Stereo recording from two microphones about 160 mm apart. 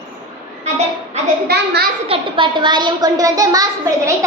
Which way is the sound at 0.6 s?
45° right (ahead or behind).